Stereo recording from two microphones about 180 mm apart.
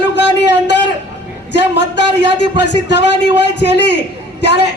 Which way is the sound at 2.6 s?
75° left (ahead or behind).